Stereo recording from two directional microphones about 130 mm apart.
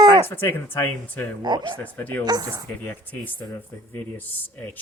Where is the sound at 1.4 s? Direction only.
35° right (ahead or behind).